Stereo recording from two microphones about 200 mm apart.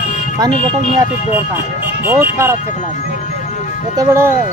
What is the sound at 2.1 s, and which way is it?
Speech, 10° right (ahead or behind).